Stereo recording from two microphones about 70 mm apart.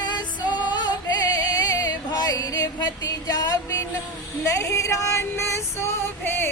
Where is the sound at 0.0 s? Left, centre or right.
Left.